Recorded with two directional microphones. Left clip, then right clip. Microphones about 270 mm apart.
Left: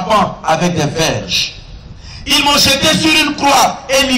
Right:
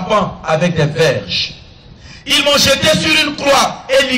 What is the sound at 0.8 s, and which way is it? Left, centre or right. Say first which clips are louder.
A man's voice: right 2 dB; right.